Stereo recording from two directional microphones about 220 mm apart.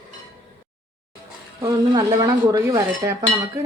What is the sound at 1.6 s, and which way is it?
Speech, 15° right (ahead or behind).